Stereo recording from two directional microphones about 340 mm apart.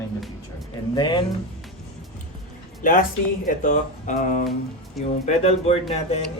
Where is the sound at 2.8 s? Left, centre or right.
Left.